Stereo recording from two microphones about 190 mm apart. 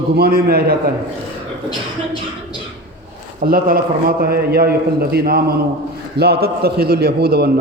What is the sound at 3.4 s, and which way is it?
A man's voice, 50° right (ahead or behind).